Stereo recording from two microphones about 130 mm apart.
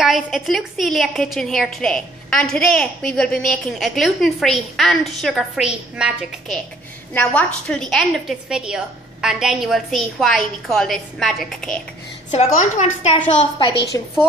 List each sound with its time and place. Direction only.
0.0 s a woman's voice: centre (ahead or behind)
7.2 s a woman's voice: 10° left (ahead or behind)
12.3 s a woman's voice: 65° left (ahead or behind)
13.9 s a woman's voice: 25° left (ahead or behind)